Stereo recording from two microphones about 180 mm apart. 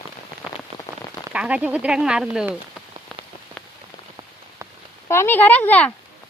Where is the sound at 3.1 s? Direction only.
5° left (ahead or behind).